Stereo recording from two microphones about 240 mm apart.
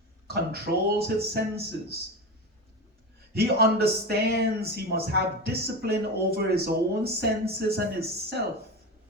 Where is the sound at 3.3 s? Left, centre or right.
Right.